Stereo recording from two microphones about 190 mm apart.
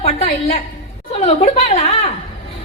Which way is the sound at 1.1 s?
30° left (ahead or behind).